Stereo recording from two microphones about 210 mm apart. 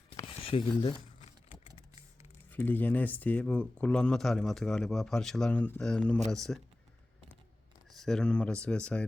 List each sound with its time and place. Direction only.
0.2 s typing: 25° left (ahead or behind)
2.5 s speech: 10° left (ahead or behind)
7.9 s speech: centre (ahead or behind)